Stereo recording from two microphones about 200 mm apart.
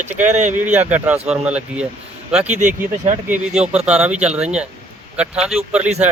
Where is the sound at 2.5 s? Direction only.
35° right (ahead or behind).